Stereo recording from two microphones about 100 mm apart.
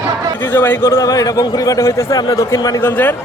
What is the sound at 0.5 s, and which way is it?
A man's voice, 20° left (ahead or behind).